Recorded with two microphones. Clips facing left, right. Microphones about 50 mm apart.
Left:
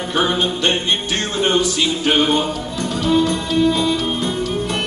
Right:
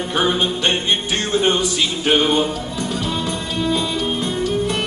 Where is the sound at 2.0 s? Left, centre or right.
Centre.